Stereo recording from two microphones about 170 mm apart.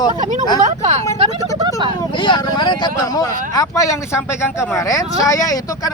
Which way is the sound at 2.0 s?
30° left (ahead or behind).